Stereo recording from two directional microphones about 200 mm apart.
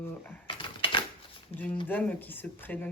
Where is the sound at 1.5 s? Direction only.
30° left (ahead or behind).